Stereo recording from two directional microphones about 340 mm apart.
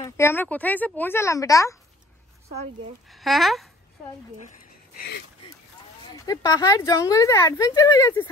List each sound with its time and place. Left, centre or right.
0.0 s speech: centre
3.1 s speech: centre
6.2 s speech: centre